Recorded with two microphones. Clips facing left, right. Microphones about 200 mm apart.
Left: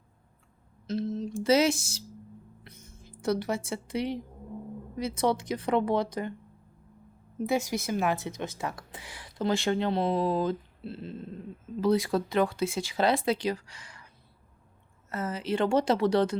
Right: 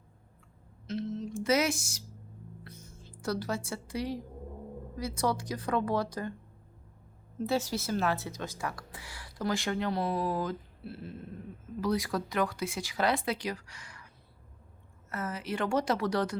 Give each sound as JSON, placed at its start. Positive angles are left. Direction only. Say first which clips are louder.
{"t": 0.9, "sound": "speech", "louder": "left 4 dB", "side_deg": 35}
{"t": 2.6, "sound": "a sound", "louder": "right 1 dB", "side_deg": 20}
{"t": 4.9, "sound": "speech", "louder": "left 4 dB", "side_deg": 20}
{"t": 7.3, "sound": "speech", "louder": "left 2 dB", "side_deg": 15}
{"t": 15.1, "sound": "speech", "louder": "left 5 dB", "side_deg": 25}